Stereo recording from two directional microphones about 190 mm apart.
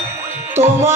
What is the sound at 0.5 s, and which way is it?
Music, 10° right (ahead or behind).